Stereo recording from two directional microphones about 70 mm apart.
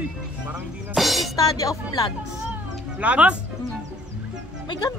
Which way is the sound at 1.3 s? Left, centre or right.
Left.